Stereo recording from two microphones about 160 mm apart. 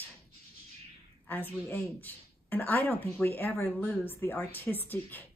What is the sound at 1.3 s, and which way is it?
A woman's voice, 10° left (ahead or behind).